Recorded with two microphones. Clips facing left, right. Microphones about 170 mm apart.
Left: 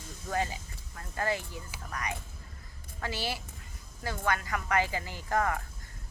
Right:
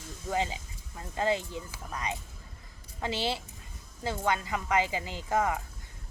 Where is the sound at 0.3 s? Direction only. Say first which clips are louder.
Right 1 dB; 15° right (ahead or behind).